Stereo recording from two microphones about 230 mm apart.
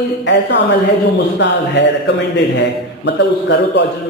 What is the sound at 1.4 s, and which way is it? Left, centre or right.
A man's voice, left.